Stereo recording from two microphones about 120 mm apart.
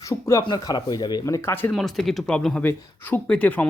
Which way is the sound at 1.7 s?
Centre (ahead or behind).